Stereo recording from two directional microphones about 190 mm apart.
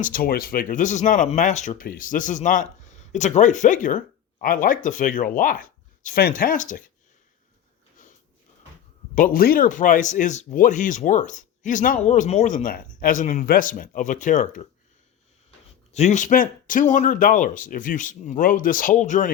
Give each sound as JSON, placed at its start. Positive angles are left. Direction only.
{"t": 0.0, "sound": "speech", "side_deg": 50}
{"t": 9.1, "sound": "speech", "side_deg": 50}
{"t": 15.9, "sound": "speech", "side_deg": 35}